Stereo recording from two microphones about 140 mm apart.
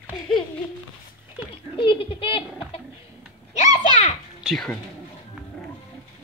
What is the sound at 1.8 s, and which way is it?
A child's voice, 40° left (ahead or behind).